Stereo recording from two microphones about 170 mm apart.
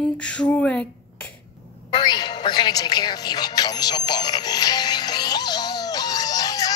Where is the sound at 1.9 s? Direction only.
25° left (ahead or behind).